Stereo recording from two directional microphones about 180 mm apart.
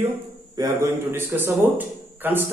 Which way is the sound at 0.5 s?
20° right (ahead or behind).